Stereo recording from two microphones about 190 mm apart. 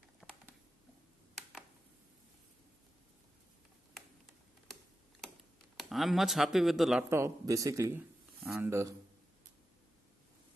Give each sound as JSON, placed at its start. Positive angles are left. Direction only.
{"t": 0.2, "sound": "a sound", "side_deg": 5}
{"t": 5.8, "sound": "speech", "side_deg": 0}
{"t": 7.1, "sound": "a man's voice", "side_deg": -15}